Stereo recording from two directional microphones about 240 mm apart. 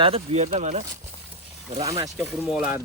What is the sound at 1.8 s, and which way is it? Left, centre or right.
Speech, centre.